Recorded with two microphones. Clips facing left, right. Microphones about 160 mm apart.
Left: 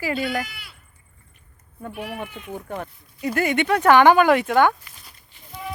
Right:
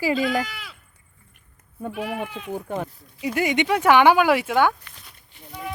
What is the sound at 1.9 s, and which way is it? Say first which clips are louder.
Speech: right 3 dB; 90° right.